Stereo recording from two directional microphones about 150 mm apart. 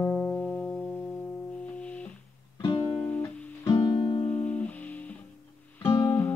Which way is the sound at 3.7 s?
35° left (ahead or behind).